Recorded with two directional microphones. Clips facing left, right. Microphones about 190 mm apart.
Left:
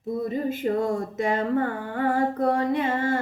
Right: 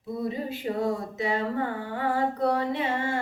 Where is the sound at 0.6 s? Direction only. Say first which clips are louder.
Left 1 dB; 50° left (ahead or behind).